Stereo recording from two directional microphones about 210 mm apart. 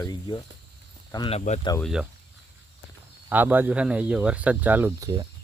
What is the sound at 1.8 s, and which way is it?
Speech, centre (ahead or behind).